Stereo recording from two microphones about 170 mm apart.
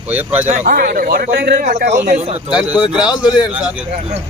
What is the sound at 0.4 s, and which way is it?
Speech, 45° right (ahead or behind).